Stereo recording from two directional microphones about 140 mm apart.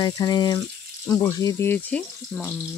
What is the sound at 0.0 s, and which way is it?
Speech, 30° left (ahead or behind).